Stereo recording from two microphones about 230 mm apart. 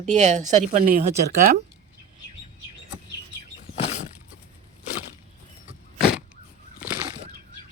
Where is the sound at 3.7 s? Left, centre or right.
Left.